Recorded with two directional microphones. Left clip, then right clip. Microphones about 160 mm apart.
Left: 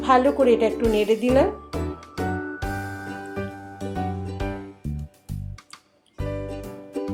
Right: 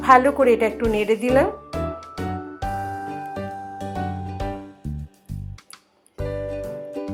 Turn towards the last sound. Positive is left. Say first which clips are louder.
# right 2 dB
turn(degrees=10)  # may be behind; listen again after turning